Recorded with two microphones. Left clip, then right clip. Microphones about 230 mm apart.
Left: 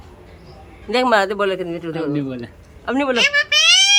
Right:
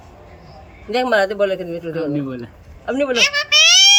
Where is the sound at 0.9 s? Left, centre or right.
Centre.